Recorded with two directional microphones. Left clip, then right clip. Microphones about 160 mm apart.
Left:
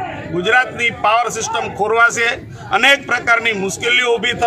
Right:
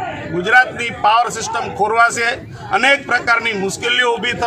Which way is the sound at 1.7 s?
5° left (ahead or behind).